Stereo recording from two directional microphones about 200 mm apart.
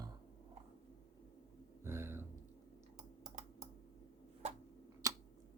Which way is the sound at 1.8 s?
10° right (ahead or behind).